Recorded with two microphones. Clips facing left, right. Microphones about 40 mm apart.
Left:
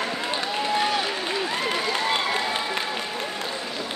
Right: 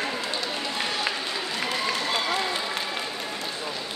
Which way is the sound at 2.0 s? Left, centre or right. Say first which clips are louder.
Left 2 dB; left.